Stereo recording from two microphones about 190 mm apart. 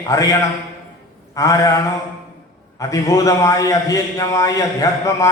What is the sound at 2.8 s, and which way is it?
A man's voice, 15° left (ahead or behind).